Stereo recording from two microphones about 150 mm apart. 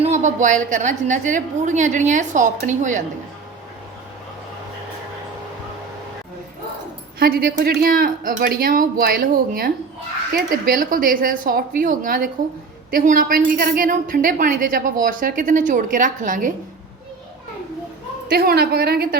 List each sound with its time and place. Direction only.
0.0 s a woman's voice: 55° right (ahead or behind)
7.2 s a woman's voice: 90° right; by 16.5 s 60° right (ahead or behind)
18.3 s a woman's voice: 90° right